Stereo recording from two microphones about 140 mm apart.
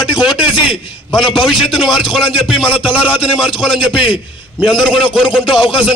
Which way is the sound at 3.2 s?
35° left (ahead or behind).